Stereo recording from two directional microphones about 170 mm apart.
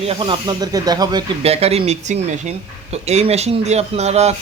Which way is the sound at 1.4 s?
35° right (ahead or behind).